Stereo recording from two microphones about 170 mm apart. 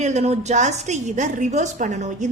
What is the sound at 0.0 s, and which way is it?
A woman's voice, 40° right (ahead or behind).